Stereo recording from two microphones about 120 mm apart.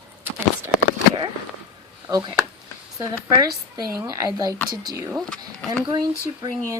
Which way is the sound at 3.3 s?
35° right (ahead or behind).